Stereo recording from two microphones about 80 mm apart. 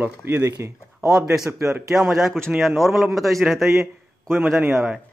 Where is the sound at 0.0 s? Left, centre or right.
Right.